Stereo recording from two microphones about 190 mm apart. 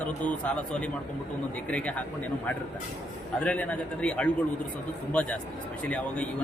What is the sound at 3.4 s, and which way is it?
Speech, 5° left (ahead or behind).